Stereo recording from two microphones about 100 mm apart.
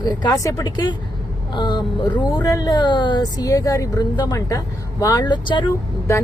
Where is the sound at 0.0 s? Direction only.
45° left (ahead or behind).